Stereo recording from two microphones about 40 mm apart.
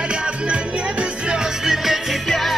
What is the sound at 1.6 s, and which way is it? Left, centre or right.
Music, centre.